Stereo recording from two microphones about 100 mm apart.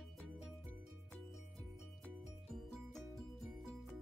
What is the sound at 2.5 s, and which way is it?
Music, centre (ahead or behind).